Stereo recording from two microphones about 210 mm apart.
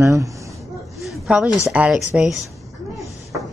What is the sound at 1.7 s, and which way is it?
Speech, 5° right (ahead or behind).